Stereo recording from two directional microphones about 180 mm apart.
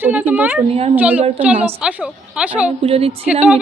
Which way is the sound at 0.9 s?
10° right (ahead or behind).